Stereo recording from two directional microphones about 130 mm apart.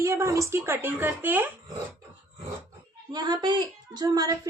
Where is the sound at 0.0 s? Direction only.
25° right (ahead or behind).